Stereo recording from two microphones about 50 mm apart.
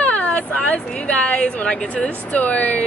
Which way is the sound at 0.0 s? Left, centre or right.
Left.